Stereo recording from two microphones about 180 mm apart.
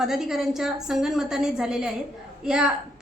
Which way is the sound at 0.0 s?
Centre (ahead or behind).